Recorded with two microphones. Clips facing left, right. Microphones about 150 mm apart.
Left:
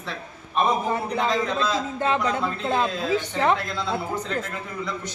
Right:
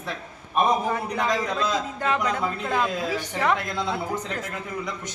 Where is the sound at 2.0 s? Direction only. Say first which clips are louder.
Left 2 dB; 25° left (ahead or behind).